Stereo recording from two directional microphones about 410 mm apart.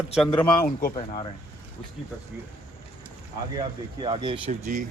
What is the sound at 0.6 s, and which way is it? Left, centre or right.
Speech, left.